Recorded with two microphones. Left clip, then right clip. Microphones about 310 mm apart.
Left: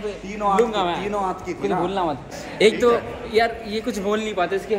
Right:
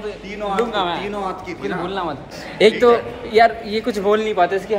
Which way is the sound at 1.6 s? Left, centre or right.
Centre.